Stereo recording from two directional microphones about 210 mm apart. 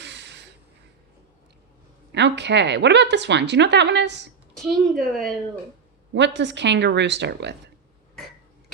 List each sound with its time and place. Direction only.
0.0 s a sound: 55° right (ahead or behind)
2.1 s a woman's voice: 55° right (ahead or behind)
4.5 s speech: centre (ahead or behind)
6.1 s a woman's voice: 55° right (ahead or behind)